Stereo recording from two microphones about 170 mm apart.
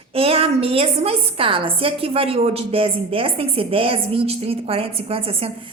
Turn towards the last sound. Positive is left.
turn(degrees=-35)  # may be behind; listen again after turning